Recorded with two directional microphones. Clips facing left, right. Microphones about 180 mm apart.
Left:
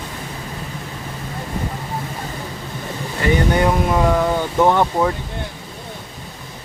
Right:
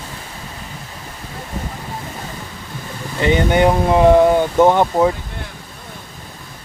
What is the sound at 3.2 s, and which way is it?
Speech, 20° right (ahead or behind).